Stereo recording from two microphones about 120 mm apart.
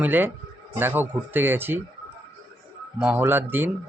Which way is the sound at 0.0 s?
15° right (ahead or behind).